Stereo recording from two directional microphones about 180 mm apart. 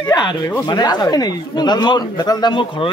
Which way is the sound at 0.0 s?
25° left (ahead or behind).